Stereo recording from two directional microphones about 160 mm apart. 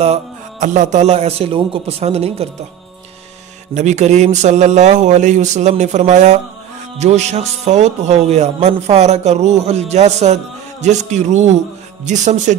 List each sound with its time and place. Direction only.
0.0 s a man's voice: 45° right (ahead or behind)
3.7 s a man's voice: 45° right (ahead or behind)